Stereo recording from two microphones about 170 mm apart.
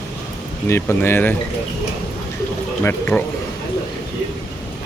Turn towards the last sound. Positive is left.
turn(degrees=10)  # may be behind; listen again after turning